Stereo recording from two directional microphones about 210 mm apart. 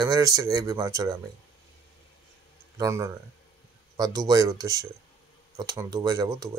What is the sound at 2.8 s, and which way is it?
Speech, 15° right (ahead or behind).